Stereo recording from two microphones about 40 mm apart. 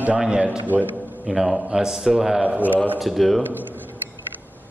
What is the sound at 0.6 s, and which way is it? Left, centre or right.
Speech, right.